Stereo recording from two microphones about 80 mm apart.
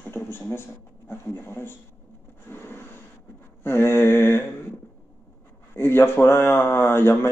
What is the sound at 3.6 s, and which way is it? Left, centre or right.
Speech, left.